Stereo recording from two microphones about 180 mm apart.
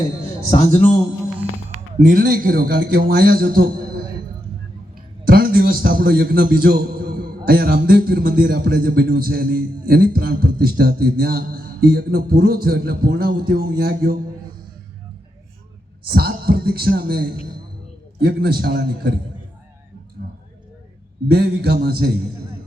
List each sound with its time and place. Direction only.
0.5 s a man's voice: 35° left (ahead or behind)
2.0 s a man's voice: 50° right (ahead or behind)
5.2 s a man's voice: 55° right (ahead or behind)
16.0 s a man's voice: 60° right (ahead or behind)
21.2 s a man's voice: 60° right (ahead or behind)